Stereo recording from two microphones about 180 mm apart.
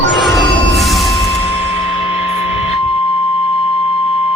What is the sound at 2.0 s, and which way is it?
Music, 35° left (ahead or behind).